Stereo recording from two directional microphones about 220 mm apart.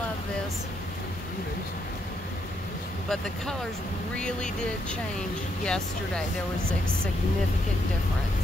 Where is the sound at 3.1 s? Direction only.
5° left (ahead or behind).